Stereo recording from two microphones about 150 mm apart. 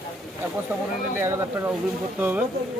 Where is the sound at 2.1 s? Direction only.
15° right (ahead or behind).